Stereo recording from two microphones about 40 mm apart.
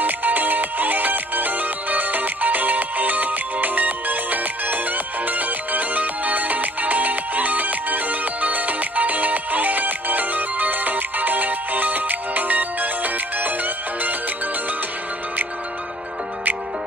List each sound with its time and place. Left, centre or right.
0.0 s music: right